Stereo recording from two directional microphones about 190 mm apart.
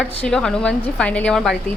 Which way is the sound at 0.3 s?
5° left (ahead or behind).